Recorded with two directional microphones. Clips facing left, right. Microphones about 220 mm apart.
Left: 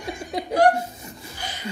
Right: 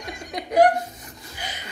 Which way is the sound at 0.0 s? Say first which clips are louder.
Left 4 dB; 30° left (ahead or behind).